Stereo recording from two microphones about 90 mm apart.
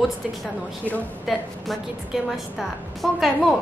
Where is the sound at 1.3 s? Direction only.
5° right (ahead or behind).